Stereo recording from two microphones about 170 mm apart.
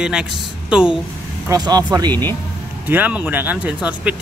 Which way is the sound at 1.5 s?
25° right (ahead or behind).